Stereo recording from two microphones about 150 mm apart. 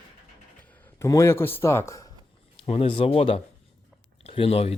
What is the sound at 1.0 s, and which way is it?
A man's voice, 20° left (ahead or behind).